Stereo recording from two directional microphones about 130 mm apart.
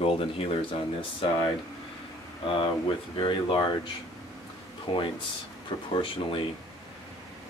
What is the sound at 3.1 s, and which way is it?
Speech, 40° left (ahead or behind).